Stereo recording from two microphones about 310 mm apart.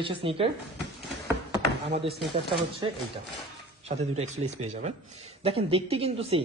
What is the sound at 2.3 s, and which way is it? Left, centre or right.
Speech, centre.